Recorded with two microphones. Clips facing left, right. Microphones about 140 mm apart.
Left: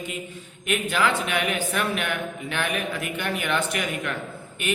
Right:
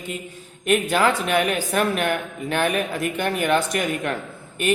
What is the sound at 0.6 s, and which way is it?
A man's voice, 40° right (ahead or behind).